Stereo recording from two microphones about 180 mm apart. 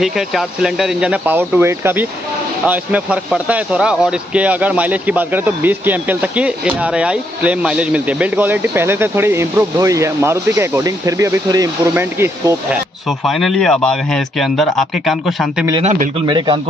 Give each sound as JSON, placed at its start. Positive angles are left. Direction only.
{"t": 0.0, "sound": "speech", "side_deg": 0}
{"t": 13.2, "sound": "speech", "side_deg": 0}
{"t": 15.8, "sound": "speech", "side_deg": -45}
{"t": 16.3, "sound": "a man's voice", "side_deg": -25}